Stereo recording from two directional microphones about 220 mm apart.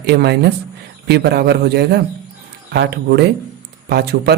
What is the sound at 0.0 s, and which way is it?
Speech, 45° right (ahead or behind).